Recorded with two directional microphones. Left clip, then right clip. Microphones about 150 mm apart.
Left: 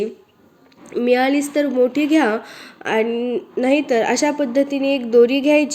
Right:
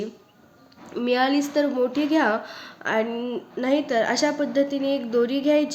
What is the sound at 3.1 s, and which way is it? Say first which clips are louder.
Speech: left 8 dB; 15° left (ahead or behind).